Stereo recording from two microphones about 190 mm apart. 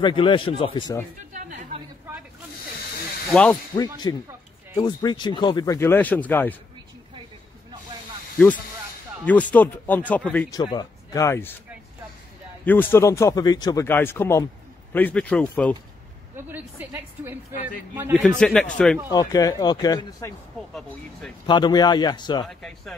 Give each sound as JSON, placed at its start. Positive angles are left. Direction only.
{"t": 0.0, "sound": "speech", "side_deg": 25}
{"t": 1.3, "sound": "a woman's voice", "side_deg": -40}
{"t": 3.3, "sound": "speech", "side_deg": 5}
{"t": 3.7, "sound": "speech", "side_deg": 20}
{"t": 9.2, "sound": "speech", "side_deg": 5}
{"t": 10.5, "sound": "speech", "side_deg": 20}
{"t": 12.6, "sound": "speech", "side_deg": 10}
{"t": 16.3, "sound": "a woman's voice", "side_deg": -10}
{"t": 18.4, "sound": "speech", "side_deg": 5}
{"t": 19.0, "sound": "speech", "side_deg": 20}
{"t": 21.5, "sound": "speech", "side_deg": 25}
{"t": 22.5, "sound": "speech", "side_deg": 0}